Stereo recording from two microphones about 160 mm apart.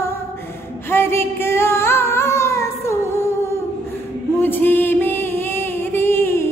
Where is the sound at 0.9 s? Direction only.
15° left (ahead or behind).